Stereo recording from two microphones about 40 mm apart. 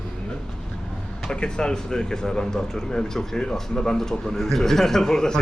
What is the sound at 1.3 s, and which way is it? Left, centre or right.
Speech, left.